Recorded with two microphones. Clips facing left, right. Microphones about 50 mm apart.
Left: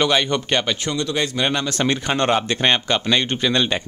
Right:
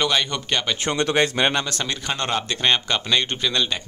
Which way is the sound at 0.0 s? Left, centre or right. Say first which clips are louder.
Left 4 dB; centre.